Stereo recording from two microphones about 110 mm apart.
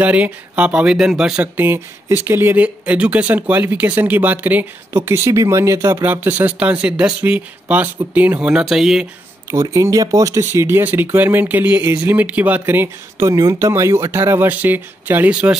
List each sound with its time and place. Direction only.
0.0 s speech: 15° right (ahead or behind)
9.5 s speech: 30° right (ahead or behind)